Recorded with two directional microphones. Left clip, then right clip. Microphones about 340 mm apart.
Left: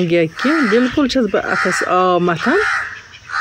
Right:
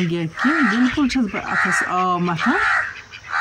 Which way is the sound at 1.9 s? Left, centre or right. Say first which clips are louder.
Left 6 dB; centre.